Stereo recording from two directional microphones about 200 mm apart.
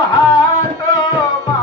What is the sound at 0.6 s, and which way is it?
Music, 20° left (ahead or behind).